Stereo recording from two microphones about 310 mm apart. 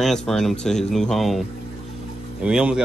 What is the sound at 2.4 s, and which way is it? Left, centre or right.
Speech, centre.